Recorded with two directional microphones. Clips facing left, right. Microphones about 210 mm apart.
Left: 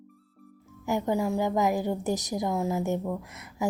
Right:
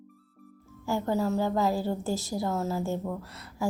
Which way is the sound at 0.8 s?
15° left (ahead or behind).